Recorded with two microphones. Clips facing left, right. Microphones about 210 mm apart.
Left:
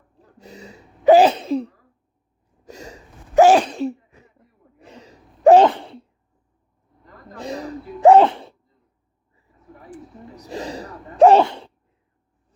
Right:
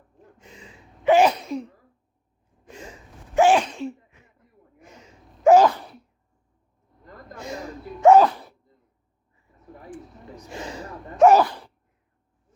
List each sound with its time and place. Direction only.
0.2 s sneeze: 40° left (ahead or behind)
7.3 s sneeze: 35° left (ahead or behind)
9.9 s sneeze: 40° left (ahead or behind)